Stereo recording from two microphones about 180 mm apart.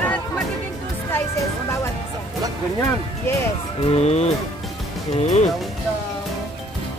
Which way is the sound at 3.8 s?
35° left (ahead or behind).